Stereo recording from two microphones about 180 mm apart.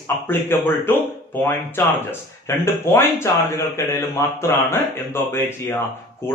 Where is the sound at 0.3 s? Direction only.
10° left (ahead or behind).